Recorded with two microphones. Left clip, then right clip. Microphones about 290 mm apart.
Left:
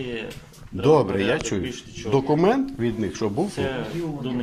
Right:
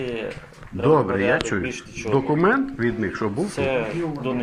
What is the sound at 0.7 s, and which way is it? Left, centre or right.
Speech, left.